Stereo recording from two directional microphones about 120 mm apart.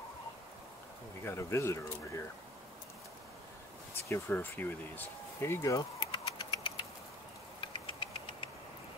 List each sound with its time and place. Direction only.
1.2 s speech: 20° left (ahead or behind)
4.1 s speech: 15° left (ahead or behind); by 6.7 s 40° left (ahead or behind)
7.6 s engine: 45° left (ahead or behind)